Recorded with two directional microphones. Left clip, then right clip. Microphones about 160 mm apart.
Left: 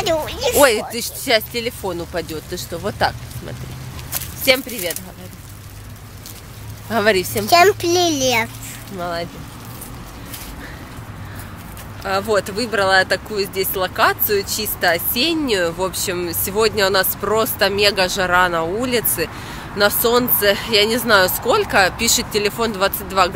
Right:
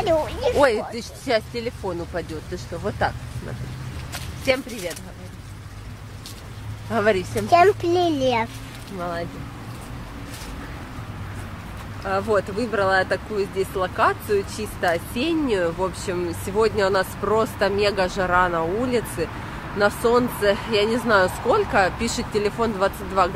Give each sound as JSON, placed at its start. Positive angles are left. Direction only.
{"t": 0.0, "sound": "a child's voice", "side_deg": 0}
{"t": 0.6, "sound": "speech", "side_deg": 25}
{"t": 6.9, "sound": "speech", "side_deg": 45}
{"t": 7.4, "sound": "a child's voice", "side_deg": 5}
{"t": 9.0, "sound": "speech", "side_deg": 25}
{"t": 12.0, "sound": "speech", "side_deg": 15}